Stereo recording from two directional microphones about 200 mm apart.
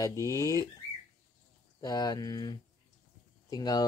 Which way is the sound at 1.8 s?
20° left (ahead or behind).